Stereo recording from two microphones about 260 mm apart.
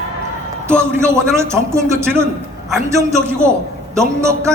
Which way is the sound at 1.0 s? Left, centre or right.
Centre.